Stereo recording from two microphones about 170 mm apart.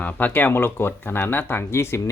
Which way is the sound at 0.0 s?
10° left (ahead or behind).